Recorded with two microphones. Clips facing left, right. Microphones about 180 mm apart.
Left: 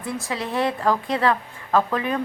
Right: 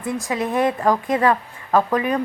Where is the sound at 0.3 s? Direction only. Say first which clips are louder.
Right 4 dB; 50° right (ahead or behind).